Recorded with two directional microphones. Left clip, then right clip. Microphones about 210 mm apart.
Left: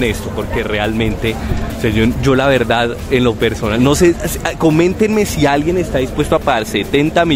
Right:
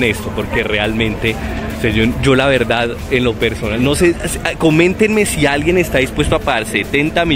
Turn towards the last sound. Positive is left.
turn(degrees=10)  # may be behind; listen again after turning